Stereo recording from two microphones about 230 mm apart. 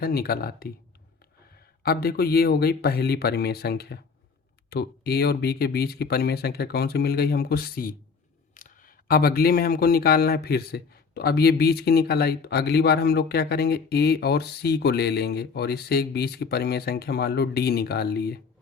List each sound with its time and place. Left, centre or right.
0.0 s speech: left
1.8 s speech: left